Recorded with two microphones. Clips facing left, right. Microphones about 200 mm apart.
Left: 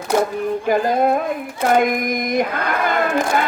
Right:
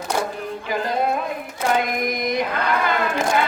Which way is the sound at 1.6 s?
50° left (ahead or behind).